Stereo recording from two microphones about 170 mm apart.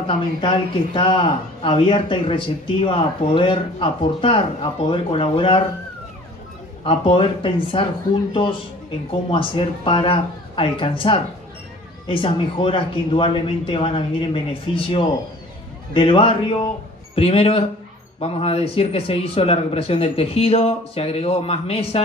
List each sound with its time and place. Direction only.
0.0 s speech: 30° left (ahead or behind)
6.8 s speech: 30° left (ahead or behind)